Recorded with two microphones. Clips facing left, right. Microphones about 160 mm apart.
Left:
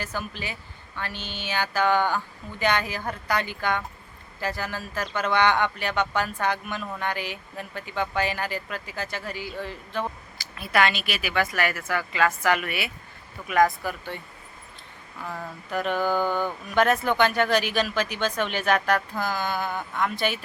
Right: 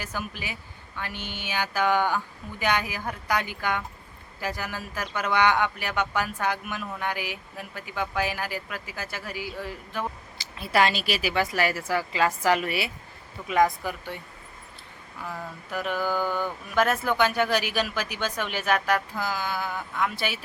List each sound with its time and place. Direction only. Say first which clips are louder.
0.0 s speech: left 2 dB; 10° right (ahead or behind)
10.3 s a woman's voice: right 1 dB; 25° right (ahead or behind)
13.5 s speech: left 1 dB; 20° right (ahead or behind)
15.2 s speech: left 1 dB; 5° right (ahead or behind)